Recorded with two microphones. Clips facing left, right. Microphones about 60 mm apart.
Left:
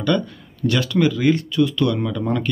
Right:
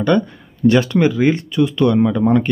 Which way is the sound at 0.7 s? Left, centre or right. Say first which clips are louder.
Right 5 dB; right.